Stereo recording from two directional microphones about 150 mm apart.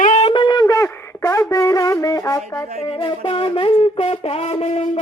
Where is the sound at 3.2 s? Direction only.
35° left (ahead or behind).